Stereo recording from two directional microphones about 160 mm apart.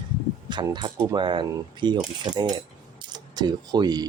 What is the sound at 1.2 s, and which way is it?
Speech, 30° right (ahead or behind).